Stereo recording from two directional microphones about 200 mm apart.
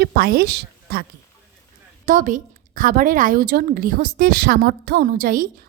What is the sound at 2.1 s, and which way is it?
A woman's voice, 40° right (ahead or behind).